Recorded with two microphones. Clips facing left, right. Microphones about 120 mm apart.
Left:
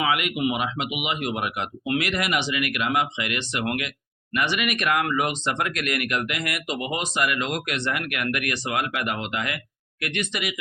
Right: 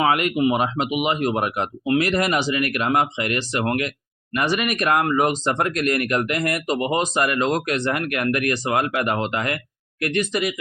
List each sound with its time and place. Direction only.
0.0 s speech: 40° right (ahead or behind)